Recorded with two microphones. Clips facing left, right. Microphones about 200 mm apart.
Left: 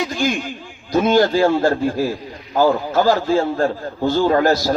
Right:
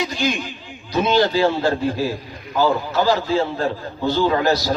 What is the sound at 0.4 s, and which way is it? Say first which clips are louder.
A man's voice: left 4 dB; 45° left (ahead or behind).